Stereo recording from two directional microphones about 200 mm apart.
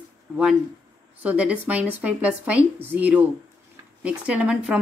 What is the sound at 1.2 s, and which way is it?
Speech, 5° right (ahead or behind).